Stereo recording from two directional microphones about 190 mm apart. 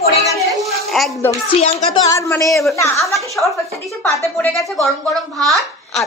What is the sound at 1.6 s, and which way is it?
A woman's voice, 20° left (ahead or behind).